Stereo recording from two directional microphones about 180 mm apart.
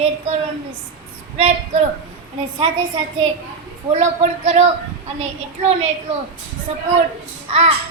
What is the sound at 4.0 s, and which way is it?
Speech, 35° right (ahead or behind).